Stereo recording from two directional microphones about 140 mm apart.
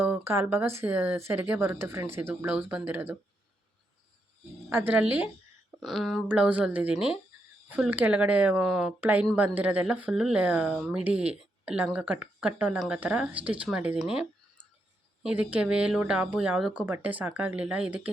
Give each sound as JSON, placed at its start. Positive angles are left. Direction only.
{"t": 0.0, "sound": "a woman's voice", "side_deg": -15}
{"t": 4.7, "sound": "a woman's voice", "side_deg": -15}
{"t": 5.8, "sound": "a woman's voice", "side_deg": 0}
{"t": 9.0, "sound": "a woman's voice", "side_deg": -10}
{"t": 15.2, "sound": "a woman's voice", "side_deg": -10}